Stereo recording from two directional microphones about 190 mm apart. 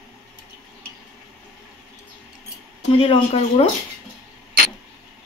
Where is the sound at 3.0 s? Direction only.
30° left (ahead or behind).